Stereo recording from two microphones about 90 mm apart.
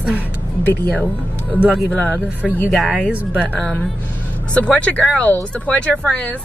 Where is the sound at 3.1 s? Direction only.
15° right (ahead or behind).